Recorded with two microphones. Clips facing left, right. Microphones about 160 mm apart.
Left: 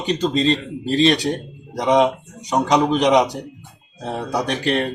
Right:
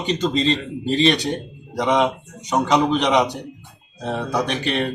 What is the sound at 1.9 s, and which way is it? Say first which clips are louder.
Speech: left 3 dB; 35° left (ahead or behind).